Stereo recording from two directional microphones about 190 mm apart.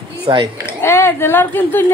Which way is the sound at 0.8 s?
10° left (ahead or behind).